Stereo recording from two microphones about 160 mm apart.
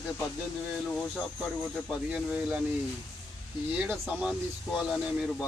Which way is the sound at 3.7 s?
10° right (ahead or behind).